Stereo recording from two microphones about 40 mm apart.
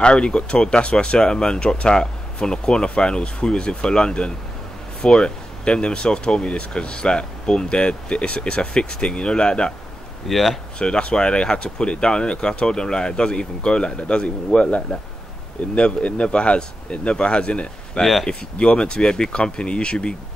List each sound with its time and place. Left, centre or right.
0.0 s speech: left
10.2 s speech: centre
10.8 s speech: left